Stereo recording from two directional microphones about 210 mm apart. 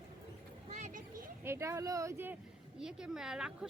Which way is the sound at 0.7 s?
35° right (ahead or behind).